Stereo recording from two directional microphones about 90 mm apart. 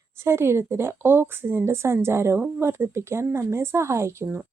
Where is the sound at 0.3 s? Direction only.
30° right (ahead or behind).